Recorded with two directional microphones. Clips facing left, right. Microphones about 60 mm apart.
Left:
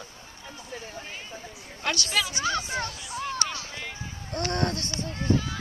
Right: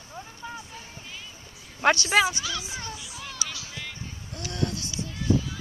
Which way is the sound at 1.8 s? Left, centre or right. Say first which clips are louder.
Right 8 dB; right.